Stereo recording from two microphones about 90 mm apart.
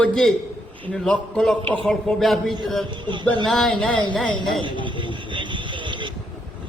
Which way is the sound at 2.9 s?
60° right (ahead or behind).